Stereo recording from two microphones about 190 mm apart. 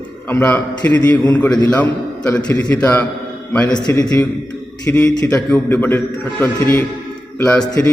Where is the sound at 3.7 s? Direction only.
20° left (ahead or behind).